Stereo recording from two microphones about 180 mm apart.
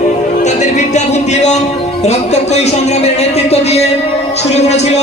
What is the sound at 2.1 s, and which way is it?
A man's voice, 35° left (ahead or behind).